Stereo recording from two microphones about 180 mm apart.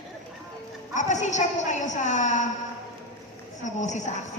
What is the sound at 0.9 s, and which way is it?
A woman's voice, 40° left (ahead or behind).